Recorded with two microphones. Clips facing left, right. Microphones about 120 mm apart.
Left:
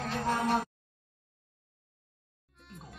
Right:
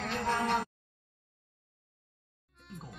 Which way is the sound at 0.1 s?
10° left (ahead or behind).